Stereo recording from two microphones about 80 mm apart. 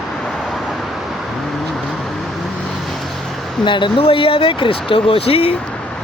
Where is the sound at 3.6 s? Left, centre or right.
Left.